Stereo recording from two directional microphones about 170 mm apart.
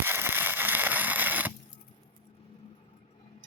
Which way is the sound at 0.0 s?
10° right (ahead or behind).